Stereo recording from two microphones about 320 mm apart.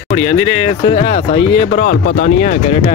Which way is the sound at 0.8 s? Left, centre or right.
Centre.